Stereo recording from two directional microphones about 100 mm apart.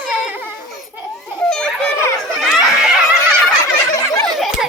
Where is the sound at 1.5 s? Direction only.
5° left (ahead or behind).